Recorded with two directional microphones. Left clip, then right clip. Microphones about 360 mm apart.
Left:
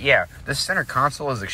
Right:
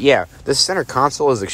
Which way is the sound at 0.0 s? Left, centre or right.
Centre.